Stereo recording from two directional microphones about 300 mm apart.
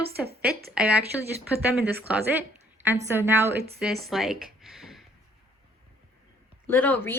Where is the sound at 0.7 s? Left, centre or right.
Centre.